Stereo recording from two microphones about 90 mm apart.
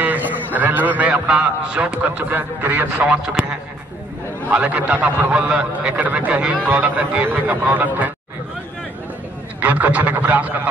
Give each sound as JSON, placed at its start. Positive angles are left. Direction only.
{"t": 0.0, "sound": "a man's voice", "side_deg": -20}
{"t": 9.6, "sound": "a man's voice", "side_deg": -15}